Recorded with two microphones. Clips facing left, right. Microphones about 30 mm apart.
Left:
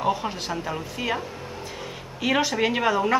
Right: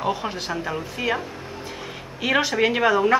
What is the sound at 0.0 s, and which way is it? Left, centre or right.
Speech, centre.